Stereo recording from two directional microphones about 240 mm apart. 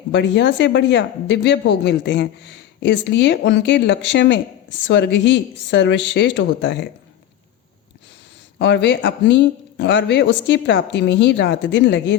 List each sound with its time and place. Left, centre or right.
0.1 s speech: left
8.5 s speech: left